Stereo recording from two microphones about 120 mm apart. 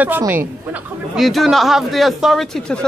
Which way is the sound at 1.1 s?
Centre (ahead or behind).